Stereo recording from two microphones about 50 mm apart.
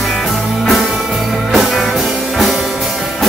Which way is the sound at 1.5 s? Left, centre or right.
Centre.